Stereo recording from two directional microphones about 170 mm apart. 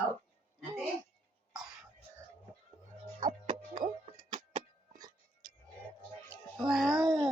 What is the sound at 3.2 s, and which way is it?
Music, 25° right (ahead or behind).